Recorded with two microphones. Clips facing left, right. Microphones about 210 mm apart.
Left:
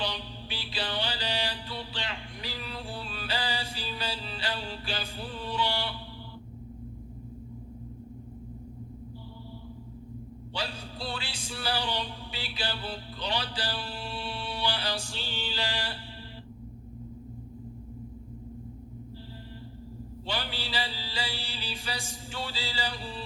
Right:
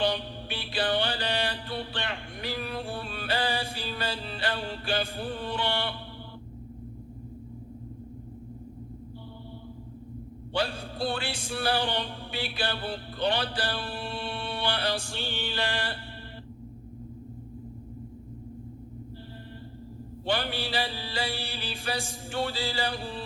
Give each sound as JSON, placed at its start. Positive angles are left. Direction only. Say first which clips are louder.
{"t": 0.0, "sound": "mantra", "louder": "right 7 dB", "side_deg": -55}
{"t": 10.5, "sound": "music", "louder": "right 7 dB", "side_deg": -55}
{"t": 20.2, "sound": "music", "louder": "right 6 dB", "side_deg": -55}